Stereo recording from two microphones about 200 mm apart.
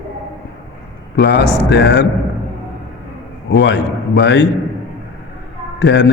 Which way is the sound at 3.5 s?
60° left (ahead or behind).